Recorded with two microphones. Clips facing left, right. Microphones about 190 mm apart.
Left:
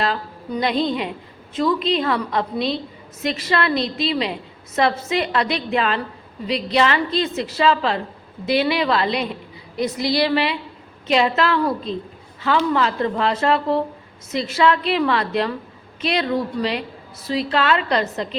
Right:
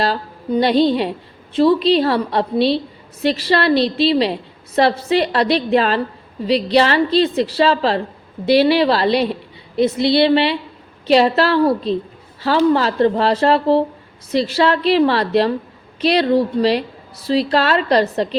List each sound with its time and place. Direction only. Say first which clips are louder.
0.0 s a woman's voice: right 3 dB; 35° right (ahead or behind)